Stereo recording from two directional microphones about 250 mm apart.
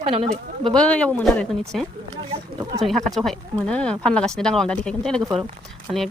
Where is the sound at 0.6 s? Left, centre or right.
Centre.